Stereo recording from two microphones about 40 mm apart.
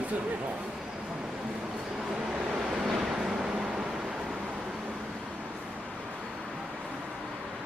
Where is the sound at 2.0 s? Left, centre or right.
Centre.